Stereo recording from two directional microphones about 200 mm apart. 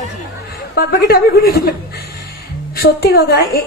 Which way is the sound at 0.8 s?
50° left (ahead or behind).